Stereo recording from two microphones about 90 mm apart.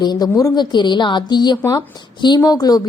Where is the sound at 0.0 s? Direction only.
50° left (ahead or behind).